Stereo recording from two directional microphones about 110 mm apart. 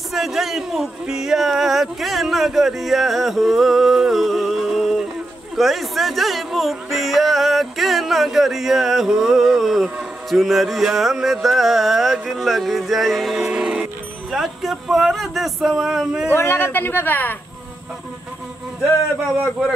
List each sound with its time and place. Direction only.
0.1 s speech: centre (ahead or behind)
16.3 s a woman's voice: 20° left (ahead or behind)